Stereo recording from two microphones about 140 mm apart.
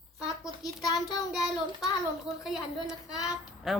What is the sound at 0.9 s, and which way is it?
Child singing, 25° left (ahead or behind).